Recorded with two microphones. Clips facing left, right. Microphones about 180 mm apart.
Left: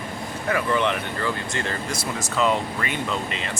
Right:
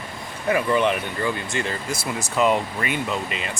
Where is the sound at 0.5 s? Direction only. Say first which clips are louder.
Right 3 dB; 15° right (ahead or behind).